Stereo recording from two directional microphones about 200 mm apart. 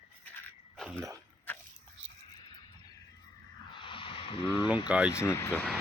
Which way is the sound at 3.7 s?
25° left (ahead or behind).